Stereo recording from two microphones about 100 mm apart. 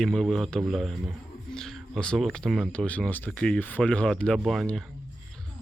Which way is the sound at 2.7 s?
15° left (ahead or behind).